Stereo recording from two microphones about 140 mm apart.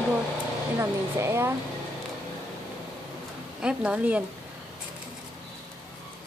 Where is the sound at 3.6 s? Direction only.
5° right (ahead or behind).